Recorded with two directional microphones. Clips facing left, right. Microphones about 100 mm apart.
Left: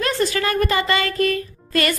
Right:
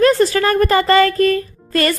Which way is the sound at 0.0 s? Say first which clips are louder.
Right 8 dB; 40° right (ahead or behind).